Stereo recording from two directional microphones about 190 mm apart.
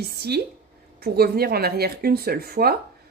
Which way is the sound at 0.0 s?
55° right (ahead or behind).